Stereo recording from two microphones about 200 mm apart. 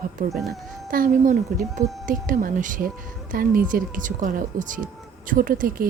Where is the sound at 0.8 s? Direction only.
45° right (ahead or behind).